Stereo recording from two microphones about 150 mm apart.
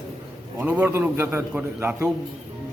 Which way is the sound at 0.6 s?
10° right (ahead or behind).